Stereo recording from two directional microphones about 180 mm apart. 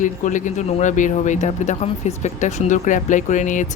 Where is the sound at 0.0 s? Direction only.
45° left (ahead or behind).